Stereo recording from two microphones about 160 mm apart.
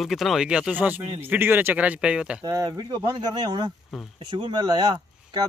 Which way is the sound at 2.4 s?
25° right (ahead or behind).